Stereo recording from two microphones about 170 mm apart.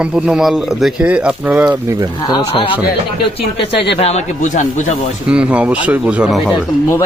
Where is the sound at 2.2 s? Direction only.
30° left (ahead or behind).